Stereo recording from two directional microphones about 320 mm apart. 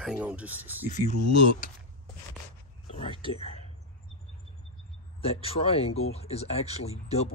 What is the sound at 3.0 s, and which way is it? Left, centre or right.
Whispering, centre.